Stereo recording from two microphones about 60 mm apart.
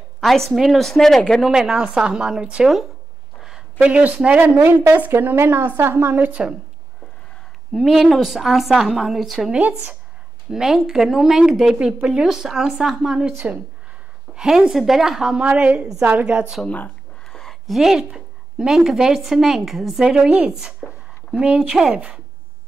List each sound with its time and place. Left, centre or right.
0.2 s a woman's voice: centre
3.3 s a sound: centre
3.8 s a woman's voice: right
5.2 s a woman's voice: right
7.7 s a woman's voice: centre
9.5 s a woman's voice: centre
10.5 s a woman's voice: centre
14.3 s a woman's voice: centre
15.4 s a woman's voice: right
16.6 s speech: left
17.3 s a sound: centre
17.6 s a woman's voice: centre